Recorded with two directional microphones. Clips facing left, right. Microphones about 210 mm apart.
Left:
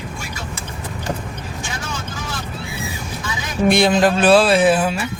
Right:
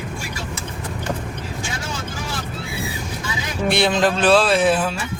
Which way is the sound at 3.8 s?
10° left (ahead or behind).